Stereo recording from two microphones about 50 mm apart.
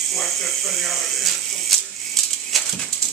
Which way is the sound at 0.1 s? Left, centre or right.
Centre.